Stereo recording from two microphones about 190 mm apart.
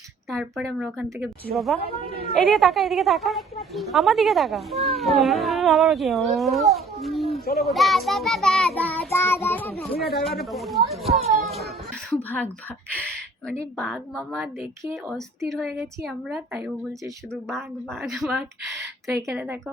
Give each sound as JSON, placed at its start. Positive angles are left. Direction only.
{"t": 0.3, "sound": "a woman's voice", "side_deg": 0}
{"t": 9.9, "sound": "speech", "side_deg": 55}
{"t": 10.2, "sound": "a woman's voice", "side_deg": 0}
{"t": 13.7, "sound": "a woman's voice", "side_deg": 5}
{"t": 14.4, "sound": "a woman's voice", "side_deg": -10}
{"t": 18.8, "sound": "a sound", "side_deg": -15}